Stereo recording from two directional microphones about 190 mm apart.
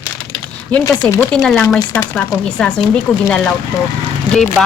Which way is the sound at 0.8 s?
15° left (ahead or behind).